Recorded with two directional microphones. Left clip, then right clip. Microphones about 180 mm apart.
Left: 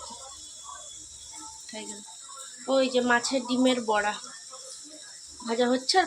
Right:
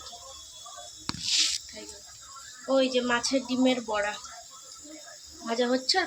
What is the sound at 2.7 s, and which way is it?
Speech, 30° left (ahead or behind).